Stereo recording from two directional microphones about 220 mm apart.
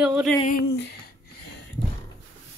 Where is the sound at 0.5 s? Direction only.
50° left (ahead or behind).